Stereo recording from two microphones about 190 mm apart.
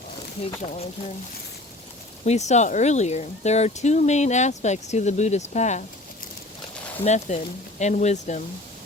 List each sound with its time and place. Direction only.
0.6 s speech: 35° left (ahead or behind)
2.2 s speech: 35° left (ahead or behind)
7.0 s speech: 35° left (ahead or behind)